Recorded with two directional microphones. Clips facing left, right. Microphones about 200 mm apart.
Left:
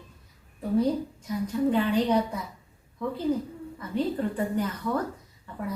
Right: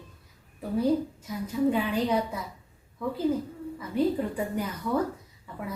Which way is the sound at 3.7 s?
10° right (ahead or behind).